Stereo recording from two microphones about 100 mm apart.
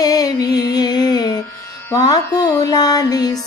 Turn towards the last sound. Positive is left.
turn(degrees=40)  # may be behind; listen again after turning